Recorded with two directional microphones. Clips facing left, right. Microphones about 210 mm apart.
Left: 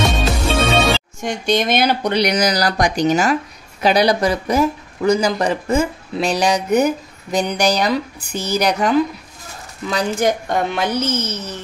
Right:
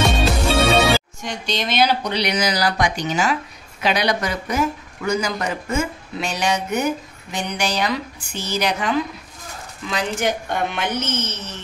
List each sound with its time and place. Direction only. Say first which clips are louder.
0.0 s music: even; centre (ahead or behind)
1.2 s speech: left 7 dB; 50° left (ahead or behind)